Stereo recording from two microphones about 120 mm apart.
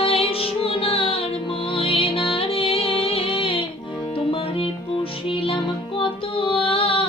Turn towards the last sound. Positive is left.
turn(degrees=50)  # may be behind; listen again after turning